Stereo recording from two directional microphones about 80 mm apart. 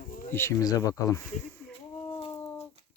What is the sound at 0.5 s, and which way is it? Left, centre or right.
Speech, left.